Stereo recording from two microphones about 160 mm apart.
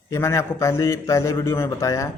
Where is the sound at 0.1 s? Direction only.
15° left (ahead or behind).